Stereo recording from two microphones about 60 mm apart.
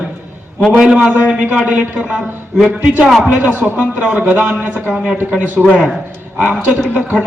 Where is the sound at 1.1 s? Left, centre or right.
Right.